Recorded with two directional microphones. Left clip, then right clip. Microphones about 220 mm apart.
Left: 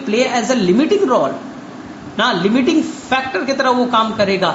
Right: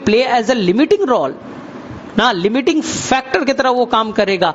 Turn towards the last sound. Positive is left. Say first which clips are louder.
# even
turn(degrees=-50)  # may be behind; listen again after turning